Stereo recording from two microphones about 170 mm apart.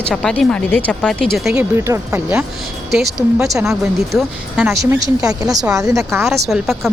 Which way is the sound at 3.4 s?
Centre (ahead or behind).